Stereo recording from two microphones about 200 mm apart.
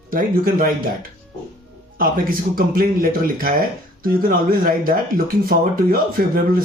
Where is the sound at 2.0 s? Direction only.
45° right (ahead or behind).